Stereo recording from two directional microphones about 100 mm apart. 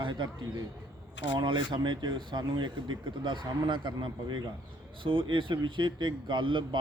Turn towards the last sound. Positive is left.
turn(degrees=-55)  # may be behind; listen again after turning